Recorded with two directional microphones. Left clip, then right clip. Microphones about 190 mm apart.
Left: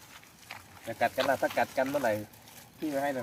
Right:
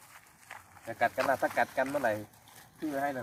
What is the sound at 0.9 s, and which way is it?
Speech, 10° left (ahead or behind).